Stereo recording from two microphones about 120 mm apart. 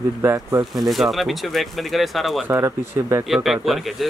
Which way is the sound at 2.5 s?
25° right (ahead or behind).